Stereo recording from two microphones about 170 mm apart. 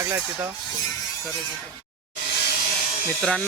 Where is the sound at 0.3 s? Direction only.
10° right (ahead or behind).